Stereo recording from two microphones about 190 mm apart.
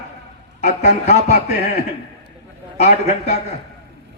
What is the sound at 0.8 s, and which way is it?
Speech, 35° left (ahead or behind).